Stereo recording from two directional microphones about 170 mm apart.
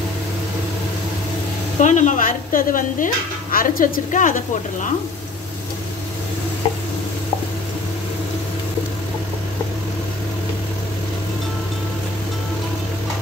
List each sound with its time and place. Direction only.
1.8 s a woman's voice: 45° left (ahead or behind)